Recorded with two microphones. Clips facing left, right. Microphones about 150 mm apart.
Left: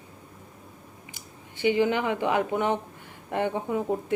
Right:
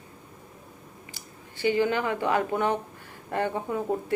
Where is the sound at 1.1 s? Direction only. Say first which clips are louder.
Even; 15° left (ahead or behind).